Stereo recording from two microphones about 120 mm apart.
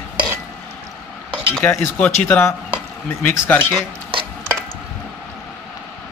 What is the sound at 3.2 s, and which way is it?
Speech, 15° left (ahead or behind).